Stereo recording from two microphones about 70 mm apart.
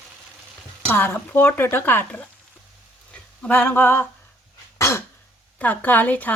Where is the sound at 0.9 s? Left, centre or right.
Left.